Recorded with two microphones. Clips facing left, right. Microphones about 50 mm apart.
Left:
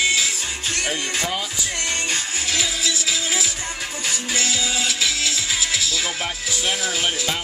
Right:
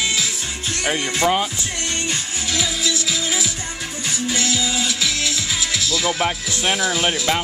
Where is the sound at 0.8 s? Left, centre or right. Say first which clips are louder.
Right 6 dB; right.